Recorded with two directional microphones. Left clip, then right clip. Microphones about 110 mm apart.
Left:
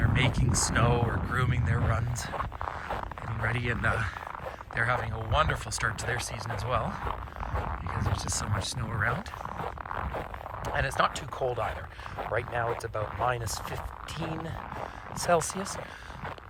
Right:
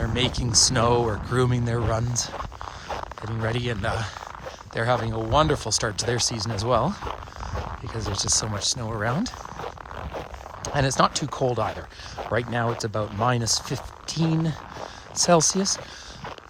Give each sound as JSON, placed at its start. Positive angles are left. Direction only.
{"t": 0.0, "sound": "speech", "side_deg": -40}
{"t": 0.8, "sound": "speech", "side_deg": -55}
{"t": 2.1, "sound": "speech", "side_deg": -25}
{"t": 4.7, "sound": "speech", "side_deg": -35}
{"t": 7.0, "sound": "a sound", "side_deg": -20}
{"t": 7.9, "sound": "speech", "side_deg": -50}
{"t": 8.5, "sound": "speech", "side_deg": -25}
{"t": 9.6, "sound": "a sound", "side_deg": -20}
{"t": 10.6, "sound": "speech", "side_deg": -60}
{"t": 12.8, "sound": "speech", "side_deg": -90}
{"t": 15.2, "sound": "speech", "side_deg": -65}